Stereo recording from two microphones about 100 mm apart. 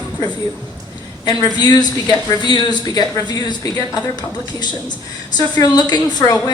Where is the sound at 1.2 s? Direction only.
45° left (ahead or behind).